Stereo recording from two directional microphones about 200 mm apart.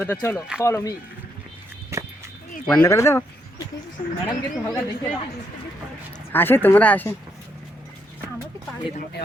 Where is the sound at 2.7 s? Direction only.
10° left (ahead or behind).